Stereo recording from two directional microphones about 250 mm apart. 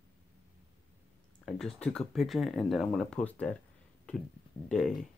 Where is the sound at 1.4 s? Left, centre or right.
Centre.